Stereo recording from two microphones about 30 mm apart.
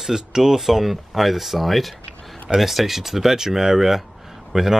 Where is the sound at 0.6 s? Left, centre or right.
Centre.